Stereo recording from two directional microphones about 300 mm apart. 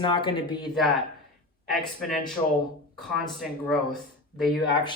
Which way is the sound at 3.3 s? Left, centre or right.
Centre.